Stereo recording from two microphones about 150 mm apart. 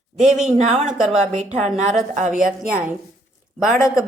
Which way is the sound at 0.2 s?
5° right (ahead or behind).